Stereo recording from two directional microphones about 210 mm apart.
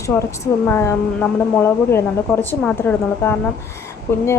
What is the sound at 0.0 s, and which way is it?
A woman's voice, 15° left (ahead or behind).